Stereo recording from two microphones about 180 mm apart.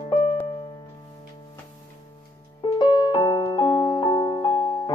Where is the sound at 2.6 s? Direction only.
25° left (ahead or behind).